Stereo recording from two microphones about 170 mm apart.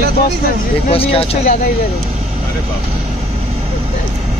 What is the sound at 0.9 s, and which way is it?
Speech, 35° left (ahead or behind).